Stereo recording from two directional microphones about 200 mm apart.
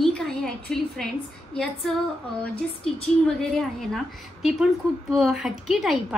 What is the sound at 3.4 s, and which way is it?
A woman's voice, centre (ahead or behind).